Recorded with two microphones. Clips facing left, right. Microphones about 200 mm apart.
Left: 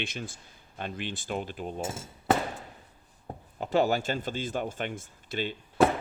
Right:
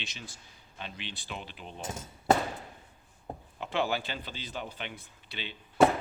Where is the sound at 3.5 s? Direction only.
40° left (ahead or behind).